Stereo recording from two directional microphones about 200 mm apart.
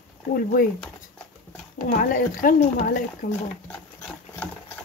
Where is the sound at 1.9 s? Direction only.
40° left (ahead or behind).